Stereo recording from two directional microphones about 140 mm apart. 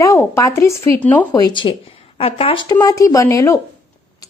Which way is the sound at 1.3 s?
30° left (ahead or behind).